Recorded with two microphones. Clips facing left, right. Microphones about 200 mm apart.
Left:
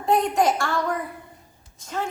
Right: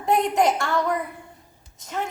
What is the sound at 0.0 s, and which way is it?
A woman's voice, 20° right (ahead or behind).